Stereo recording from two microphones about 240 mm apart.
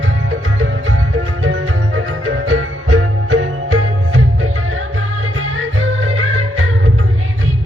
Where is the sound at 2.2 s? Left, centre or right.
Right.